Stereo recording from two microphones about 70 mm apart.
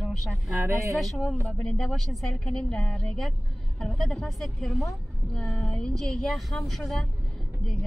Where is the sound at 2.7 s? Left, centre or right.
Centre.